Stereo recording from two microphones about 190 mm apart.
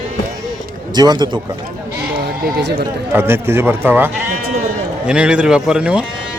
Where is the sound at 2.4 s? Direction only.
55° right (ahead or behind).